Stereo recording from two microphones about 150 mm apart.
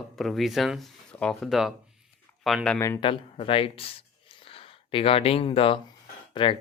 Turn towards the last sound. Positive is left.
turn(degrees=35)  # may be behind; listen again after turning